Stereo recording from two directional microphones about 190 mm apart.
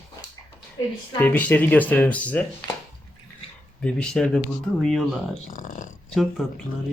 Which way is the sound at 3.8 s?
5° left (ahead or behind).